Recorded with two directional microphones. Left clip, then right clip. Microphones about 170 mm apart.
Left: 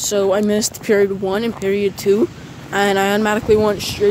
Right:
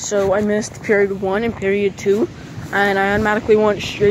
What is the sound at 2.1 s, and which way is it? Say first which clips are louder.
Speech: left 2 dB; 35° left (ahead or behind).